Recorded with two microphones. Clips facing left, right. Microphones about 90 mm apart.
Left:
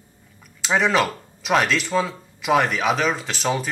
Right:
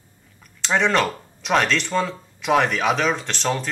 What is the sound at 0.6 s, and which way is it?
Speech, 5° left (ahead or behind).